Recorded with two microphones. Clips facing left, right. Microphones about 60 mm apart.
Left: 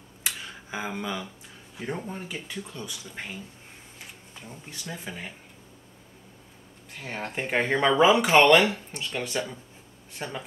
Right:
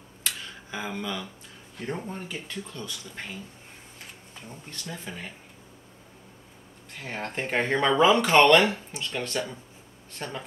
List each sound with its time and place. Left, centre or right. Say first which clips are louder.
0.2 s a sound: left 1 dB; centre
2.0 s speech: even; centre
4.5 s speech: even; centre
7.0 s speech: even; centre